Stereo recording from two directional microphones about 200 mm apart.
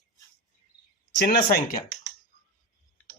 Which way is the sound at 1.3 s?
50° left (ahead or behind).